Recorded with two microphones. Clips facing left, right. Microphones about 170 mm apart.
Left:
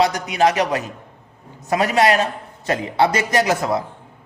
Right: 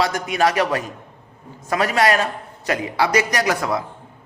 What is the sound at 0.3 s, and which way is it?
A man's voice, 20° left (ahead or behind).